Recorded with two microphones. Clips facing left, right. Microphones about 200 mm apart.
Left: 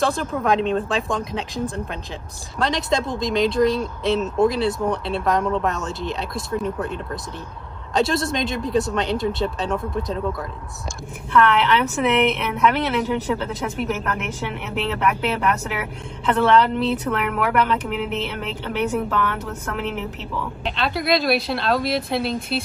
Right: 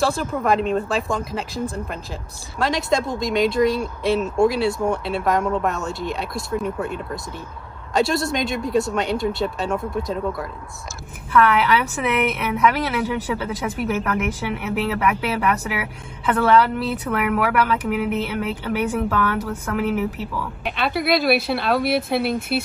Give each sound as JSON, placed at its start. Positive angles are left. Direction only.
{"t": 0.0, "sound": "a woman's voice", "side_deg": -5}
{"t": 21.8, "sound": "speech", "side_deg": -60}